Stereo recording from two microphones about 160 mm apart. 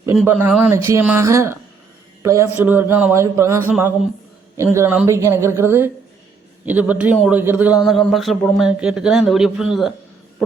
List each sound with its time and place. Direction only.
0.3 s a man's voice: 10° right (ahead or behind)
7.9 s speech: centre (ahead or behind)